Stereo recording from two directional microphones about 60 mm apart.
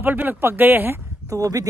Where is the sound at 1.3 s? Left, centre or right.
Right.